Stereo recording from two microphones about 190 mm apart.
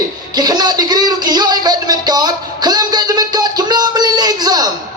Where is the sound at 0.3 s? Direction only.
20° right (ahead or behind).